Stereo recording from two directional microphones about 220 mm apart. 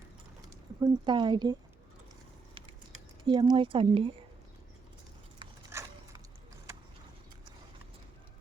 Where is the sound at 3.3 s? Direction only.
20° right (ahead or behind).